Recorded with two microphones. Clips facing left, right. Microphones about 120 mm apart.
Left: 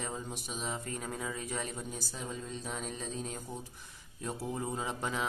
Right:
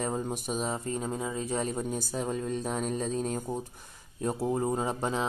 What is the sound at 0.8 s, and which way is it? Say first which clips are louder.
Speech: right 6 dB; 25° right (ahead or behind).